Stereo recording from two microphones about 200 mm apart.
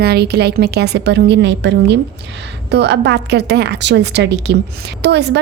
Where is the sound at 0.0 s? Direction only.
55° right (ahead or behind).